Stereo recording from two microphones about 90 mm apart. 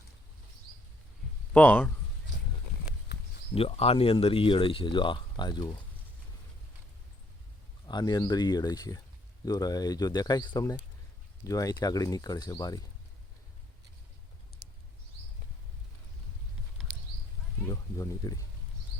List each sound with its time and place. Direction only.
1.5 s speech: 15° left (ahead or behind)
3.5 s speech: 90° left; by 5.6 s 55° left (ahead or behind)
7.9 s speech: 50° left (ahead or behind)
11.4 s speech: 40° left (ahead or behind)
17.7 s speech: 35° left (ahead or behind)